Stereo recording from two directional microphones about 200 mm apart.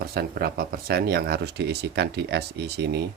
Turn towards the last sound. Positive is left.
turn(degrees=-55)  # may be behind; listen again after turning